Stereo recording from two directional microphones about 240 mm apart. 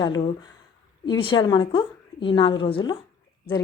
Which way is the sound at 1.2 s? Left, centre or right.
Centre.